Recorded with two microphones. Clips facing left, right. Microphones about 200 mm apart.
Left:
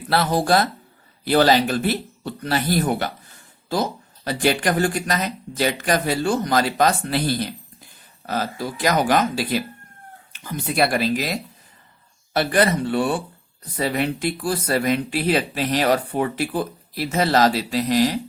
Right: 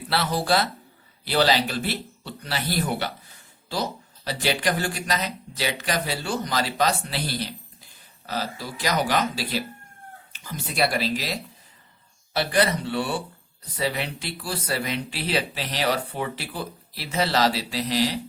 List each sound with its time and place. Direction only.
0.1 s speech: 50° left (ahead or behind)